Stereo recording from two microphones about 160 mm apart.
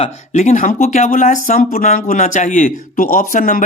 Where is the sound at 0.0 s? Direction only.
45° left (ahead or behind).